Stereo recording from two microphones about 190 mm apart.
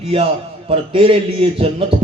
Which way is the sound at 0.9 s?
30° right (ahead or behind).